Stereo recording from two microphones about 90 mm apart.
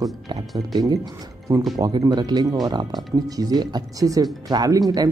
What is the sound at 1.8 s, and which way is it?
Speech, 45° right (ahead or behind).